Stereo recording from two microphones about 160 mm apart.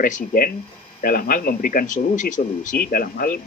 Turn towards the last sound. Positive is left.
turn(degrees=65)  # may be behind; listen again after turning